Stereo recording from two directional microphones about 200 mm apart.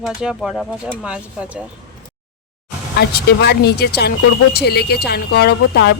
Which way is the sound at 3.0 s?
55° left (ahead or behind).